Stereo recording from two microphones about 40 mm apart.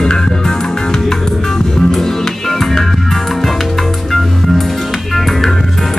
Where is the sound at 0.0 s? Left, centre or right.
Centre.